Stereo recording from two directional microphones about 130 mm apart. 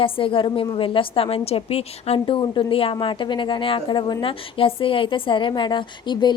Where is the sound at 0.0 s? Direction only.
45° left (ahead or behind).